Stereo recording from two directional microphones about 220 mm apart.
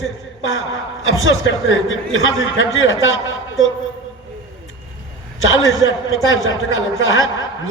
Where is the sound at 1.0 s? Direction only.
65° left (ahead or behind).